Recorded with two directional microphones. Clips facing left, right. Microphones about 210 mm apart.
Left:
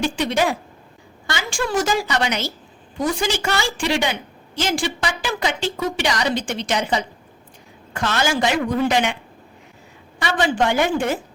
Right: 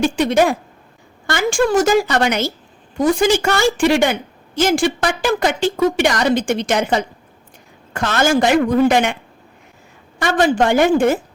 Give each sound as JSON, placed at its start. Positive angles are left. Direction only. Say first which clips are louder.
{"t": 0.0, "sound": "a woman's voice", "louder": "right 6 dB", "side_deg": -50}
{"t": 10.2, "sound": "a woman's voice", "louder": "right 5 dB", "side_deg": -45}